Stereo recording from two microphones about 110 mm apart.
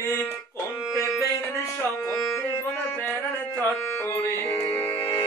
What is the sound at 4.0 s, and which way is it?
Music, 25° left (ahead or behind).